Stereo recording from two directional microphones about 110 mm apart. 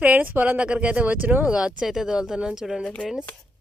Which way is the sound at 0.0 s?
15° right (ahead or behind).